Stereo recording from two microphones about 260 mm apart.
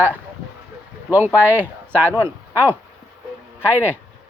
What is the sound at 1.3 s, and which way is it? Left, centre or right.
Speech, centre.